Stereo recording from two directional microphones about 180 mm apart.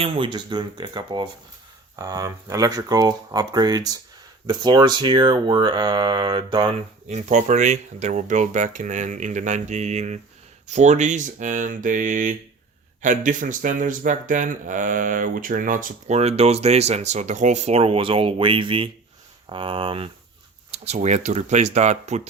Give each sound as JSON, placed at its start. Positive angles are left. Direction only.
{"t": 0.0, "sound": "speech", "side_deg": -25}
{"t": 7.1, "sound": "speech", "side_deg": -40}